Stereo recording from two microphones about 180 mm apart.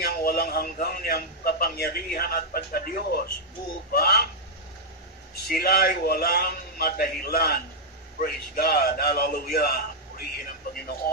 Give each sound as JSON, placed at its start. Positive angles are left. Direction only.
{"t": 0.0, "sound": "a man's voice", "side_deg": 55}
{"t": 5.5, "sound": "a man's voice", "side_deg": 55}